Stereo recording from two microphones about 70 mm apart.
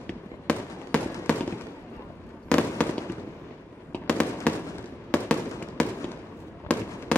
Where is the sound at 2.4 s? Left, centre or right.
Centre.